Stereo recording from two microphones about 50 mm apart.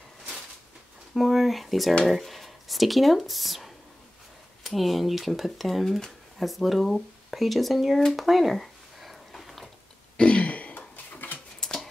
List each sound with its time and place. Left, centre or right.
1.1 s speech: centre
10.1 s throat clearing: left
11.6 s dog: centre